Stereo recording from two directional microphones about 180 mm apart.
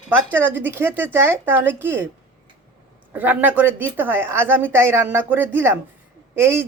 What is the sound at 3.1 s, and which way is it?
Speech, 10° right (ahead or behind).